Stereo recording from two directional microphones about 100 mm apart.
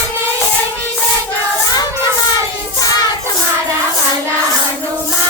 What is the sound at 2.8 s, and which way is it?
Child singing, 40° left (ahead or behind).